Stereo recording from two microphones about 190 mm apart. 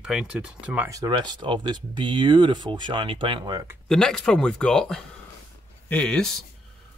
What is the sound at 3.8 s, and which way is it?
Speech, centre (ahead or behind).